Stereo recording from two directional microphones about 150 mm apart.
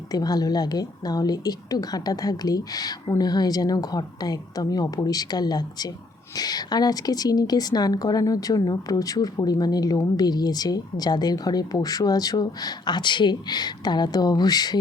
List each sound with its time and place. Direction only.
0.1 s speech: 25° left (ahead or behind)